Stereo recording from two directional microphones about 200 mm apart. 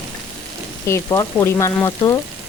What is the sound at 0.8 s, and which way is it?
Speech, 15° left (ahead or behind).